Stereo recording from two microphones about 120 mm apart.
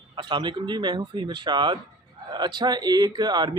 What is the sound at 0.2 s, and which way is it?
Speech, 40° right (ahead or behind).